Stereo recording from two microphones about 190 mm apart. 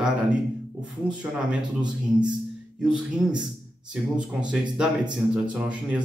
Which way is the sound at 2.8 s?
5° right (ahead or behind).